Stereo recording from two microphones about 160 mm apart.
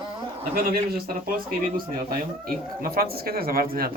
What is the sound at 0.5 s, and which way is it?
Speech, 70° right (ahead or behind).